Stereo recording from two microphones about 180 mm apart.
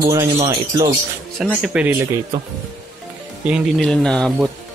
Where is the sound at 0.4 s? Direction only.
30° right (ahead or behind).